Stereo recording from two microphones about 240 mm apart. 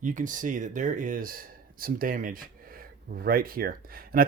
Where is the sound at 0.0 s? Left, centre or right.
Right.